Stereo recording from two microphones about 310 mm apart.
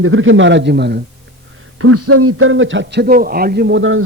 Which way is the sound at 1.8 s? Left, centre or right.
Right.